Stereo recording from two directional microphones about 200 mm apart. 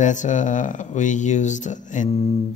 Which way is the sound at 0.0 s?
40° left (ahead or behind).